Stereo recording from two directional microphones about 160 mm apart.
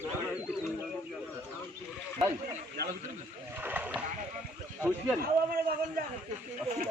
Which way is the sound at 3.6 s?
10° right (ahead or behind).